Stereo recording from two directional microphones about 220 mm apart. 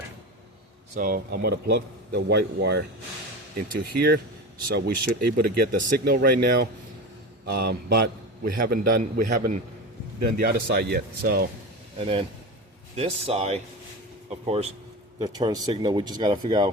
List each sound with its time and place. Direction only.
0.9 s a man's voice: 40° right (ahead or behind)
11.9 s speech: 25° right (ahead or behind)